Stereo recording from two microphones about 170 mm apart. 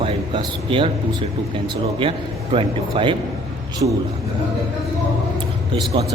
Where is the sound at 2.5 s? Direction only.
30° right (ahead or behind).